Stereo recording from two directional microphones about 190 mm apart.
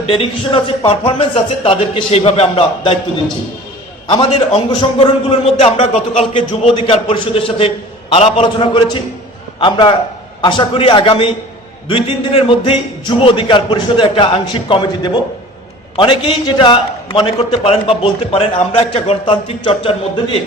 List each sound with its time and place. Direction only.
0.1 s a man's voice: 30° left (ahead or behind)
4.1 s a man's voice: 25° left (ahead or behind)